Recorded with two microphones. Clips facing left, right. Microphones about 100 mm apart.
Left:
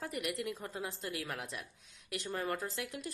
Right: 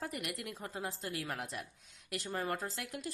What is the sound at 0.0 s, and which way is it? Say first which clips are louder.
A woman's voice: left 3 dB; 40° right (ahead or behind).